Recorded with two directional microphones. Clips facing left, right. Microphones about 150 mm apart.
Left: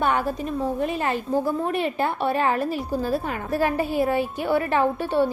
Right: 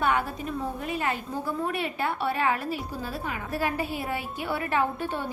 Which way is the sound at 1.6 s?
30° left (ahead or behind).